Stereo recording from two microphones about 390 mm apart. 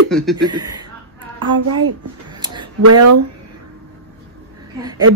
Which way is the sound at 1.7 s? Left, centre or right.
Right.